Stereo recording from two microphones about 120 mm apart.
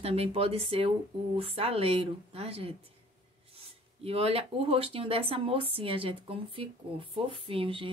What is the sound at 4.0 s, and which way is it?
Speech, 50° right (ahead or behind).